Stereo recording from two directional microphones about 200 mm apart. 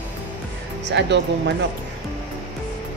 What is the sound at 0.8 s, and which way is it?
Speech, 60° right (ahead or behind).